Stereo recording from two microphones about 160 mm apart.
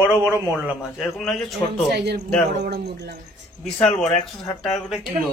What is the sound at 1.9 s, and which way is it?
Speech, 90° right.